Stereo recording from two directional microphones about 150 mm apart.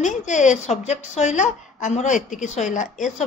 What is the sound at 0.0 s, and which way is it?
A woman's voice, 55° left (ahead or behind).